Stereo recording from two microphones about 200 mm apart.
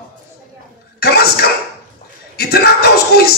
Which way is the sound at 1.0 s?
50° left (ahead or behind).